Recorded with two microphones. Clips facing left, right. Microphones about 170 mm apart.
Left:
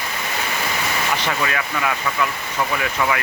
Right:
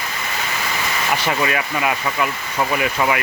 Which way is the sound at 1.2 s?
10° right (ahead or behind).